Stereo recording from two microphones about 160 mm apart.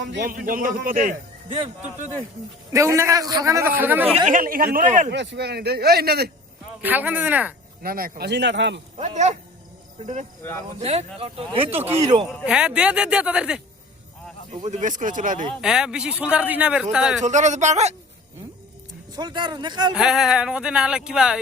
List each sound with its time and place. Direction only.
0.2 s a man's voice: 60° right (ahead or behind)
2.7 s a man's voice: 20° right (ahead or behind)
4.3 s a man's voice: 60° right (ahead or behind)
5.1 s speech: 90° right
6.8 s a man's voice: 10° right (ahead or behind)
7.8 s speech: 65° right (ahead or behind); by 8.8 s 90° right
9.0 s speech: 45° right (ahead or behind)
11.9 s speech: 20° right (ahead or behind)
12.5 s speech: 5° right (ahead or behind)
14.5 s speech: 45° right (ahead or behind)
15.6 s a man's voice: 5° right (ahead or behind)
17.2 s speech: 50° right (ahead or behind)
19.1 s speech: 25° right (ahead or behind)
19.9 s speech: 5° right (ahead or behind)